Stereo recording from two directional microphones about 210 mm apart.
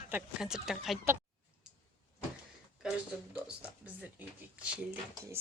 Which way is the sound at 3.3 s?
5° right (ahead or behind).